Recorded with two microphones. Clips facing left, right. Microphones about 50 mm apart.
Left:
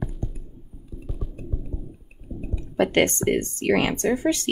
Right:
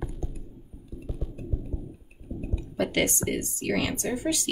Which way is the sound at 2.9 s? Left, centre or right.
Left.